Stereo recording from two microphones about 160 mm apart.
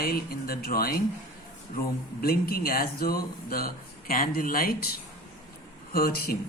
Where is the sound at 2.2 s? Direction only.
70° left (ahead or behind).